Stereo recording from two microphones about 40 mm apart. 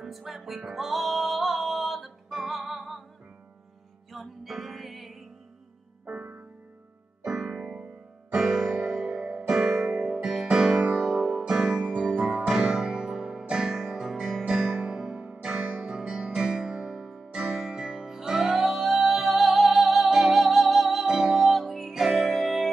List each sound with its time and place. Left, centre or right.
0.0 s music: centre
4.1 s music: centre
7.5 s keyboard: centre
8.3 s piano: centre
8.8 s music: centre
10.8 s electric piano: centre
11.4 s music: right; by 21.0 s centre
21.0 s music: centre
21.4 s music: centre